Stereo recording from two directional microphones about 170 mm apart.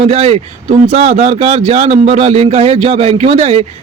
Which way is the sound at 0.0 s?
40° right (ahead or behind).